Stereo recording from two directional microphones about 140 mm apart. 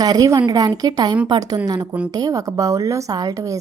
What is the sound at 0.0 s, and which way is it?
A woman's voice, 25° right (ahead or behind).